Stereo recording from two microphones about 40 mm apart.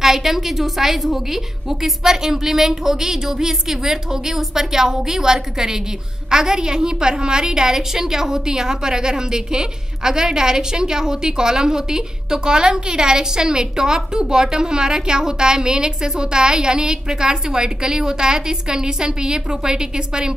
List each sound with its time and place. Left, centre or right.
0.0 s a woman's voice: centre